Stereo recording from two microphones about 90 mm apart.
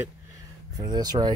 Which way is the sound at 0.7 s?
50° right (ahead or behind).